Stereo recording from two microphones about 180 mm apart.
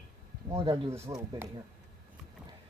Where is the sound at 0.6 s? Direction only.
15° right (ahead or behind).